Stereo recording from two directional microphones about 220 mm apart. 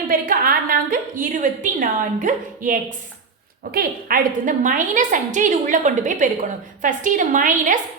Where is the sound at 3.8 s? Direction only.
40° right (ahead or behind).